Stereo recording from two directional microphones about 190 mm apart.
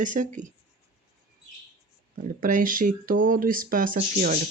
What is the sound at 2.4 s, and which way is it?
Speech, 45° right (ahead or behind).